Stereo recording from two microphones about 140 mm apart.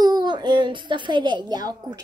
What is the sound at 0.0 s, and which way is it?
A child's voice, 30° right (ahead or behind).